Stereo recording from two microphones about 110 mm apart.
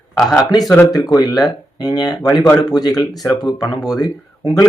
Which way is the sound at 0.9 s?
35° left (ahead or behind).